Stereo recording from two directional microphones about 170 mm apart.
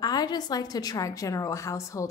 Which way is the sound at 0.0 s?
25° left (ahead or behind).